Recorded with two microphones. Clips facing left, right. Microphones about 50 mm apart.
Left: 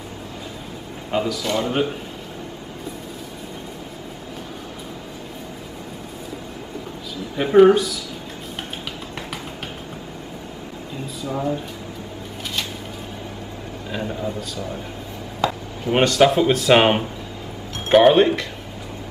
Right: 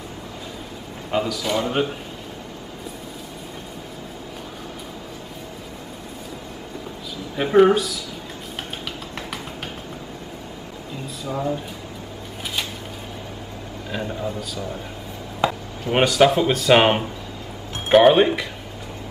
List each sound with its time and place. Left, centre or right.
1.1 s speech: centre
7.3 s speech: centre
11.2 s speech: centre
13.8 s speech: centre
15.4 s chop: right
15.9 s speech: centre